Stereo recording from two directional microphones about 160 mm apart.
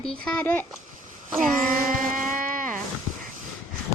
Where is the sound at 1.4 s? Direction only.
55° right (ahead or behind).